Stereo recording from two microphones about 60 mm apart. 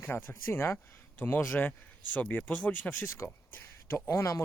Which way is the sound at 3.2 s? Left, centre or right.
Left.